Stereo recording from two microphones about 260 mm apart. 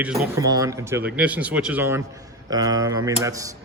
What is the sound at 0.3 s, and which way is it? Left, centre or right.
A man's voice, centre.